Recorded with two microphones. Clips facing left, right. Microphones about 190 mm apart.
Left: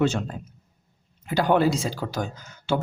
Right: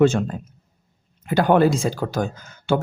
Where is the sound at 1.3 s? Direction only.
50° right (ahead or behind).